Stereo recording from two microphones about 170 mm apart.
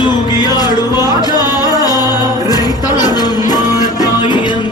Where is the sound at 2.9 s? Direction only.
25° left (ahead or behind).